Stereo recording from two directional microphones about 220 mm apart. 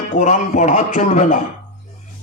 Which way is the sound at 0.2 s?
35° left (ahead or behind).